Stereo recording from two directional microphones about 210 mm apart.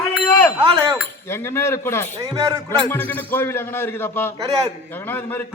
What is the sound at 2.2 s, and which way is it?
Speech, 20° right (ahead or behind).